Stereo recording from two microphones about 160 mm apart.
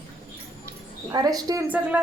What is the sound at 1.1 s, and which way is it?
Speech, 25° right (ahead or behind).